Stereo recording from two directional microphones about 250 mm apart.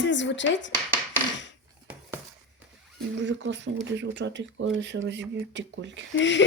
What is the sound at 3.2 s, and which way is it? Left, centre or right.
Speech, right.